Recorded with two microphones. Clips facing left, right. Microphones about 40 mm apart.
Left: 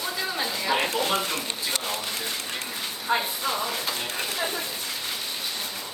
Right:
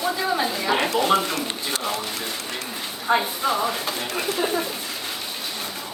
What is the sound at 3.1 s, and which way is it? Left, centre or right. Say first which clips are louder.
Speech: right 5 dB; centre.